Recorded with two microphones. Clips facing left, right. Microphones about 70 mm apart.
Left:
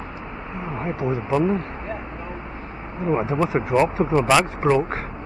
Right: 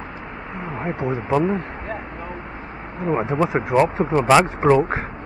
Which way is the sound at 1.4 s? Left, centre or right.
Right.